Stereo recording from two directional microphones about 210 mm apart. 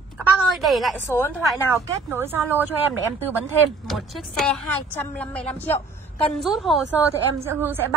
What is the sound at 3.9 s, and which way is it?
A woman's voice, centre (ahead or behind).